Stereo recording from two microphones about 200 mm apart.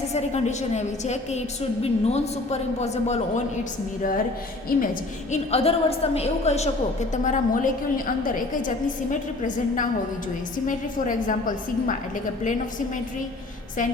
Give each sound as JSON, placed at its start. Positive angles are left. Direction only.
{"t": 0.1, "sound": "a woman's voice", "side_deg": 35}
{"t": 4.7, "sound": "a woman's voice", "side_deg": 45}
{"t": 5.3, "sound": "a woman's voice", "side_deg": 30}